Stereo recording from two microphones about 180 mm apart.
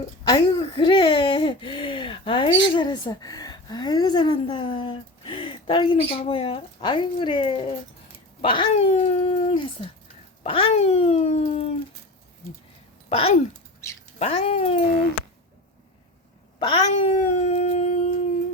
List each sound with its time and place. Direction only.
0.4 s speech: 25° left (ahead or behind)
13.1 s speech: 35° left (ahead or behind)
16.6 s speech: 25° left (ahead or behind)
17.2 s howl: 40° left (ahead or behind)